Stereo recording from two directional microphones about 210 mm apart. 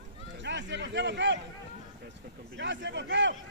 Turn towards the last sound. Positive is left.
turn(degrees=-55)  # may be behind; listen again after turning